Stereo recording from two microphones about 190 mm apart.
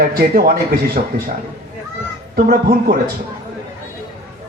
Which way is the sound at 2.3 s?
55° right (ahead or behind).